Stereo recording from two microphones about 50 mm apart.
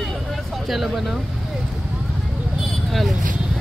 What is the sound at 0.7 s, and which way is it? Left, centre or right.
Speech, centre.